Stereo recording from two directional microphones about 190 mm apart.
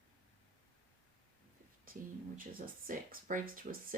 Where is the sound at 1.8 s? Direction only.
45° right (ahead or behind).